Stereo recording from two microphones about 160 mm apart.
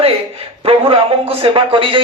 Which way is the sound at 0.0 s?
40° right (ahead or behind).